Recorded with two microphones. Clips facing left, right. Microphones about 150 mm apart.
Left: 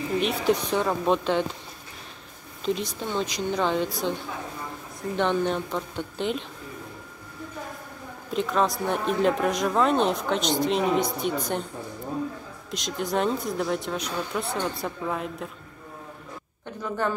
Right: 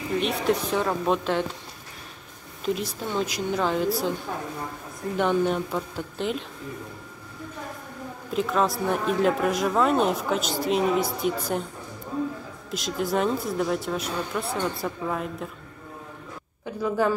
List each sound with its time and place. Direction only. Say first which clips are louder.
0.2 s speech: left 1 dB; centre (ahead or behind)
2.6 s speech: even; 5° right (ahead or behind)
5.1 s speech: right 1 dB; 5° right (ahead or behind)
8.3 s speech: even; centre (ahead or behind)
12.7 s speech: right 1 dB; 5° right (ahead or behind)
16.6 s a woman's voice: right 4 dB; 5° right (ahead or behind)